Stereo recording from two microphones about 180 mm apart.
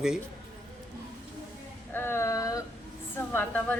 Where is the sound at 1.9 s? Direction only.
15° left (ahead or behind).